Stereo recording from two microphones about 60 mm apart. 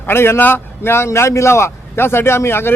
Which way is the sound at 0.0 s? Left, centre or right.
Left.